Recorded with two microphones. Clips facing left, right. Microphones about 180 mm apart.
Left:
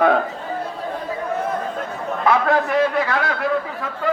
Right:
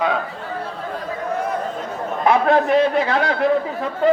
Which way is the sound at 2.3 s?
25° right (ahead or behind).